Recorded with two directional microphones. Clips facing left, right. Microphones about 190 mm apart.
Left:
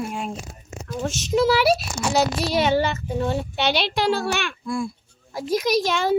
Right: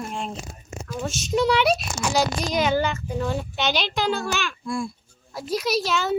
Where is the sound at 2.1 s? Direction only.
30° left (ahead or behind).